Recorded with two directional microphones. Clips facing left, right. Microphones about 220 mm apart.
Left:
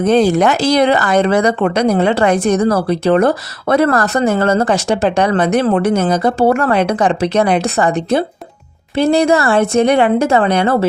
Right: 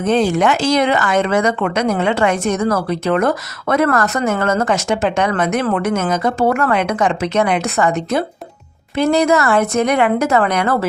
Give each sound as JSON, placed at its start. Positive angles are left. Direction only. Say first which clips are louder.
{"t": 0.0, "sound": "speech", "louder": "left 3 dB", "side_deg": 40}